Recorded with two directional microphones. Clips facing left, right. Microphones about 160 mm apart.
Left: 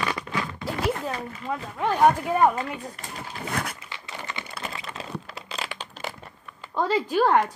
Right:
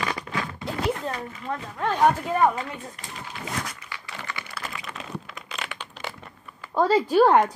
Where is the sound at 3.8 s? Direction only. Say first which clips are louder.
Even; 20° left (ahead or behind).